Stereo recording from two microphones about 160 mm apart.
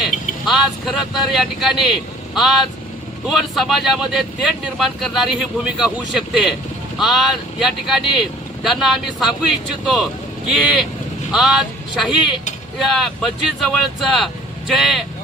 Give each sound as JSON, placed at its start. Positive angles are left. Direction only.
{"t": 0.0, "sound": "a man's voice", "side_deg": 0}
{"t": 14.7, "sound": "speech", "side_deg": 0}